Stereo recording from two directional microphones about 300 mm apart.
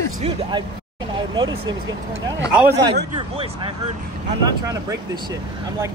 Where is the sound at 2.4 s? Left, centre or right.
Right.